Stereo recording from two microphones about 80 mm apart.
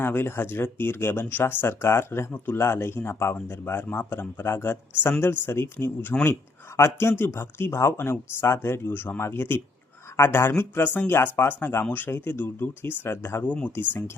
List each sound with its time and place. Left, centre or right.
0.0 s speech: left
13.4 s speech: centre